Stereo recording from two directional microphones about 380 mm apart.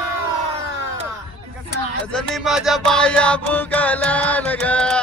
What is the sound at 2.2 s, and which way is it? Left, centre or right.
Music, centre.